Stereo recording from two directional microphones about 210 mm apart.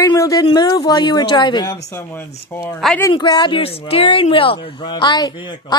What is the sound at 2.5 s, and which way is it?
A woman's voice, 10° left (ahead or behind).